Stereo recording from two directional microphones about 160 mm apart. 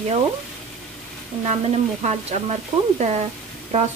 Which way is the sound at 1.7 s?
40° right (ahead or behind).